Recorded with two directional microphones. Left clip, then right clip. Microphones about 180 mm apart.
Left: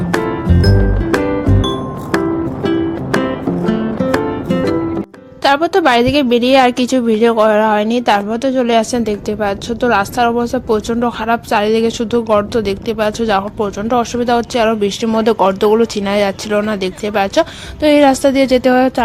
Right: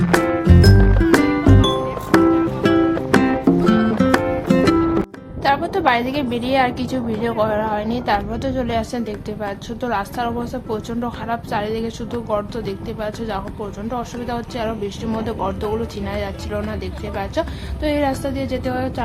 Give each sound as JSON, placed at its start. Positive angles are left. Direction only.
{"t": 0.6, "sound": "music", "side_deg": 0}
{"t": 5.4, "sound": "a woman's voice", "side_deg": 35}